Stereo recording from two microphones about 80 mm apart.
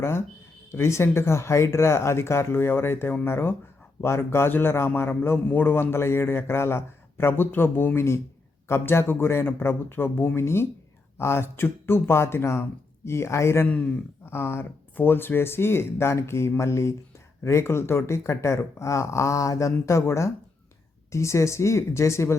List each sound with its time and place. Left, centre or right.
0.0 s a man's voice: left
13.7 s speech: centre
14.3 s speech: left